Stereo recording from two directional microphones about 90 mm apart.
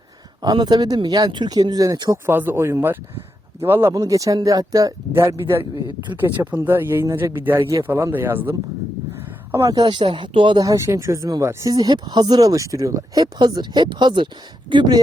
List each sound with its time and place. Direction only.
0.4 s speech: 55° right (ahead or behind)
2.2 s speech: 25° right (ahead or behind)
3.9 s speech: 40° right (ahead or behind)
6.1 s speech: 20° right (ahead or behind)
7.3 s speech: 25° right (ahead or behind)
8.1 s speech: 20° right (ahead or behind)
9.7 s speech: 60° right (ahead or behind)
10.6 s speech: 35° right (ahead or behind); by 15.0 s 55° right (ahead or behind)